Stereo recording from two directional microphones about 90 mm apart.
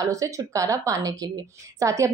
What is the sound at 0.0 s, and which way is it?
A woman's voice, 40° right (ahead or behind).